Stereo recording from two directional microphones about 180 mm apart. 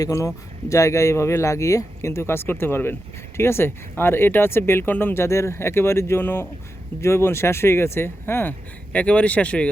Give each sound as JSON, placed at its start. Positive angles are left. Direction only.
{"t": 0.0, "sound": "speech", "side_deg": 15}